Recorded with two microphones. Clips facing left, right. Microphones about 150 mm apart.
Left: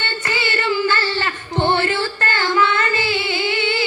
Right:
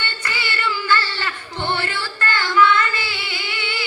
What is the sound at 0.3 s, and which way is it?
Child singing, 20° left (ahead or behind).